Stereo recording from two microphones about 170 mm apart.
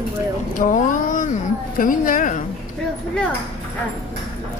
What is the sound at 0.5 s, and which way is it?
Speech, 50° left (ahead or behind).